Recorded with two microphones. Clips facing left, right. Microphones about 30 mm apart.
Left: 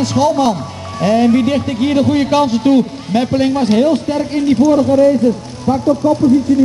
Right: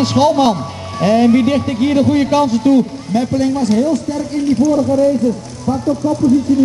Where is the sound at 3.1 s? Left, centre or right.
Left.